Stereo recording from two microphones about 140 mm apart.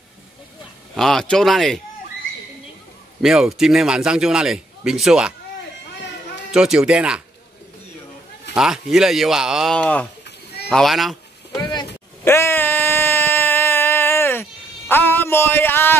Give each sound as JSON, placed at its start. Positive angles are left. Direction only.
{"t": 0.9, "sound": "a man's voice", "side_deg": 0}
{"t": 3.2, "sound": "a man's voice", "side_deg": -5}
{"t": 6.5, "sound": "a man's voice", "side_deg": -5}
{"t": 8.5, "sound": "a man's voice", "side_deg": -5}
{"t": 9.8, "sound": "a man's voice", "side_deg": 10}
{"t": 11.5, "sound": "a sound", "side_deg": 30}
{"t": 12.3, "sound": "a sound", "side_deg": 15}